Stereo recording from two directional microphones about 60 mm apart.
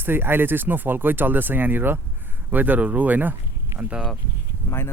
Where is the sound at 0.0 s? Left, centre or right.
Right.